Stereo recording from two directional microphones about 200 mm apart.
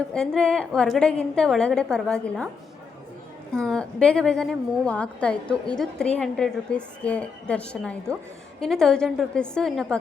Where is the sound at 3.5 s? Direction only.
5° left (ahead or behind).